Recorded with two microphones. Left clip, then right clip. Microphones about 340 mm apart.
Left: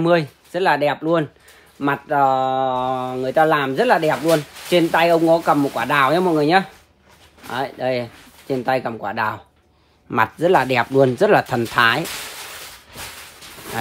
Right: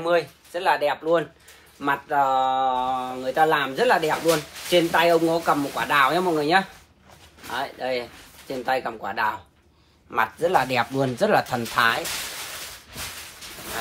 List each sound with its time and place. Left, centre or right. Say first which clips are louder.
0.1 s speech: left 4 dB; left